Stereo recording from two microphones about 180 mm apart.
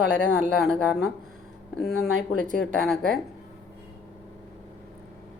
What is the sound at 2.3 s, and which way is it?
Speech, 50° right (ahead or behind).